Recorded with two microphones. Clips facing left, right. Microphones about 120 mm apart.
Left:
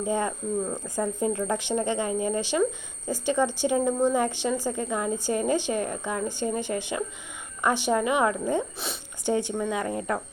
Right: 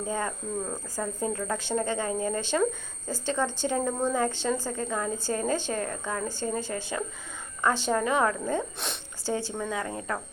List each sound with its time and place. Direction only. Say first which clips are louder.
0.0 s speech: left 4 dB; 20° left (ahead or behind)